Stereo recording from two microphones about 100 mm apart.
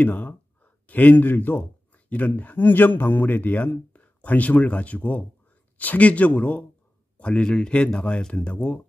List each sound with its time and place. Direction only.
0.0 s speech: 15° left (ahead or behind)